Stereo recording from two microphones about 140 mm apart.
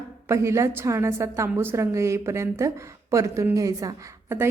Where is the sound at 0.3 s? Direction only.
20° right (ahead or behind).